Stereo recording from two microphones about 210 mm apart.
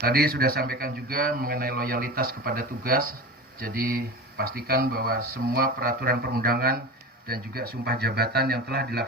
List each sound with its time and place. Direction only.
0.0 s speech: 45° right (ahead or behind)